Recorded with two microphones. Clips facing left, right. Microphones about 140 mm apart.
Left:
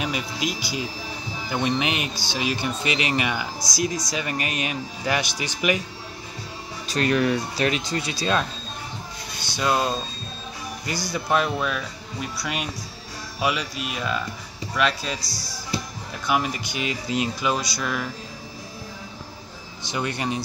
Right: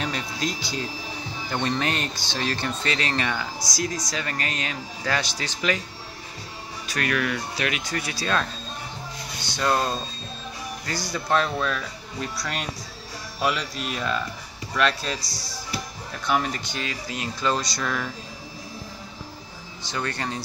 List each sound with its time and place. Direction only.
0.0 s speech: 10° left (ahead or behind)
6.9 s speech: 25° left (ahead or behind)
9.6 s speech: 10° left (ahead or behind)
11.1 s speech: 10° left (ahead or behind)
15.3 s speech: 25° right (ahead or behind)
16.3 s speech: 10° left (ahead or behind)
19.9 s speech: 15° left (ahead or behind)